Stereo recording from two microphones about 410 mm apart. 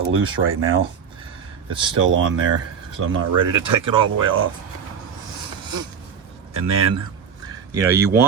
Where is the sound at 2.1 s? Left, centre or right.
Right.